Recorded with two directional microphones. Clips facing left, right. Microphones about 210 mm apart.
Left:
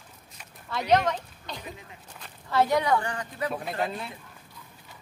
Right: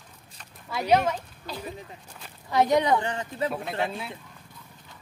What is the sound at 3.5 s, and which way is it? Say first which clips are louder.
Speech: right 1 dB; centre (ahead or behind).